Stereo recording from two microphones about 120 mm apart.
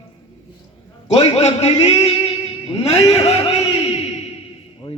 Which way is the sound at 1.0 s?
65° left (ahead or behind).